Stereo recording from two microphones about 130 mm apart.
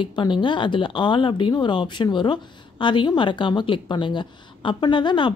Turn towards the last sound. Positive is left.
turn(degrees=35)  # may be behind; listen again after turning